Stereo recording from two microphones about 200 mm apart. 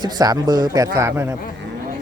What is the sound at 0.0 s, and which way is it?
Speech, 20° right (ahead or behind).